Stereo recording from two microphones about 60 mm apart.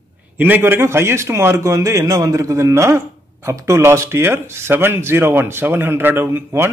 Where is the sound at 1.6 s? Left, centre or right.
Right.